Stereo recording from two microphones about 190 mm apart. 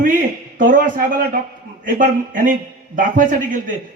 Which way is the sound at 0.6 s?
45° right (ahead or behind).